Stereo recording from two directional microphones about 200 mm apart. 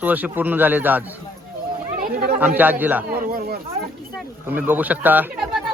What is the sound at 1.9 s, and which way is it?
Chatter, 45° right (ahead or behind).